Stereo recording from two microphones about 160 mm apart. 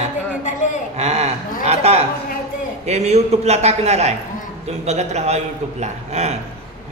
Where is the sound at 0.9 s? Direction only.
45° right (ahead or behind).